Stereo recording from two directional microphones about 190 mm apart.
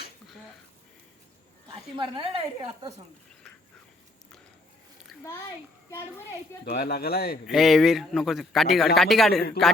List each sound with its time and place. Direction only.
2.0 s a woman's voice: 25° right (ahead or behind)
5.9 s a woman's voice: 15° left (ahead or behind)
6.7 s speech: 55° left (ahead or behind)
7.4 s a man's voice: centre (ahead or behind)